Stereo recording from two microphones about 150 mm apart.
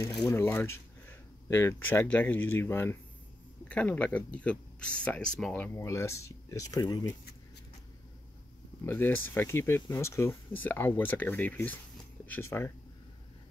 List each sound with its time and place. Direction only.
0.3 s speech: 15° left (ahead or behind)
5.8 s speech: 20° left (ahead or behind)
8.8 s speech: 15° left (ahead or behind)